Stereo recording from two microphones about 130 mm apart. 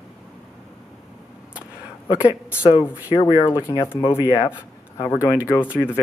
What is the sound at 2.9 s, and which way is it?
Speech, 10° right (ahead or behind).